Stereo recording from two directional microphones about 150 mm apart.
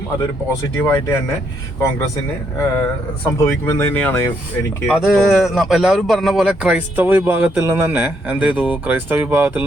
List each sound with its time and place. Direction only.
0.8 s speech: 15° left (ahead or behind)
2.6 s speech: 15° left (ahead or behind)
4.9 s speech: centre (ahead or behind)